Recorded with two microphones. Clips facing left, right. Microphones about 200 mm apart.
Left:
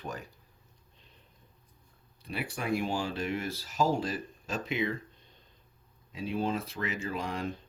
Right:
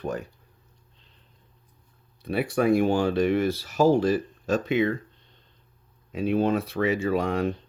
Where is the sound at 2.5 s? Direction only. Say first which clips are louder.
Right 11 dB; 60° right (ahead or behind).